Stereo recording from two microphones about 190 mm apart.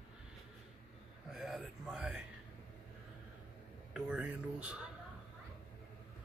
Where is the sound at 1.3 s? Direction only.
Centre (ahead or behind).